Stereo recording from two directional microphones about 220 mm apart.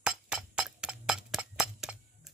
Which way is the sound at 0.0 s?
5° right (ahead or behind).